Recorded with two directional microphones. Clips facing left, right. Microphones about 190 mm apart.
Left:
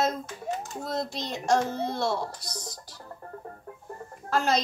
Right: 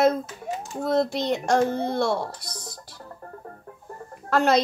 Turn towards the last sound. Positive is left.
turn(degrees=-60)  # may be behind; listen again after turning